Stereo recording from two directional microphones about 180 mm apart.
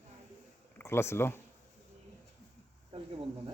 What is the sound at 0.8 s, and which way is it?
Speech, 15° left (ahead or behind).